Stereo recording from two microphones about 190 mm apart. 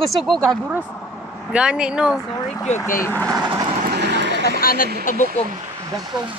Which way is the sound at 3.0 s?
10° left (ahead or behind).